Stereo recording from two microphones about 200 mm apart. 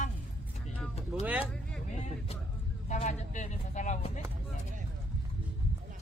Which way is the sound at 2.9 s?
35° left (ahead or behind).